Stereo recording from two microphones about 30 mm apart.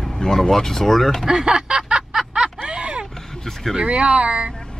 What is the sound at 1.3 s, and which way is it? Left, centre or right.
Snicker, right.